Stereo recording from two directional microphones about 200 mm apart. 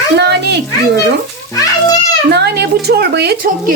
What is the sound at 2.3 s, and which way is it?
A woman's voice, 55° right (ahead or behind).